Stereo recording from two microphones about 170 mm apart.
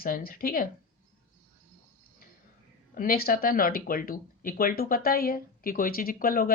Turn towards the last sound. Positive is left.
turn(degrees=60)  # may be behind; listen again after turning